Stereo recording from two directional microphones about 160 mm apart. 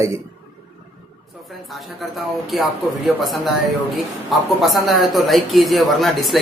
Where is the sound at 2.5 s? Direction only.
Centre (ahead or behind).